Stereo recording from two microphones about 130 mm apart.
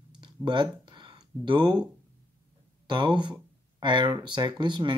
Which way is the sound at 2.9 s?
35° right (ahead or behind).